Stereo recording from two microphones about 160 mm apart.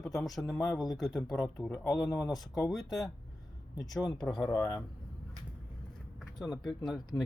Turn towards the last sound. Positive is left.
turn(degrees=0)  # may be behind; listen again after turning